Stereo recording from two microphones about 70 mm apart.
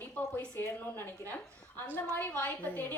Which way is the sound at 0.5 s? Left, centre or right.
Left.